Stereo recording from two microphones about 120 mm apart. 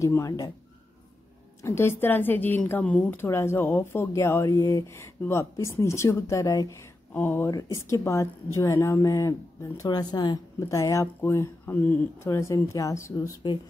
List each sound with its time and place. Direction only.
0.0 s a woman's voice: 25° left (ahead or behind)
1.6 s a woman's voice: 20° left (ahead or behind)
7.2 s speech: 15° left (ahead or behind)
7.5 s a woman's voice: 25° left (ahead or behind)
9.8 s a woman's voice: 35° left (ahead or behind)